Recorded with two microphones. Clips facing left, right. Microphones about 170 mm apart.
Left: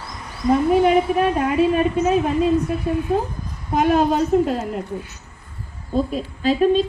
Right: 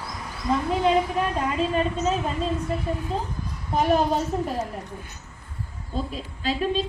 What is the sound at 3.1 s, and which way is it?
Speech, 60° left (ahead or behind).